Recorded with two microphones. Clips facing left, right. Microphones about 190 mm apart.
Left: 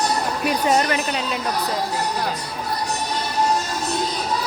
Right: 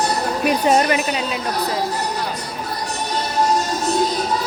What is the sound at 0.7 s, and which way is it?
Speech, 20° right (ahead or behind).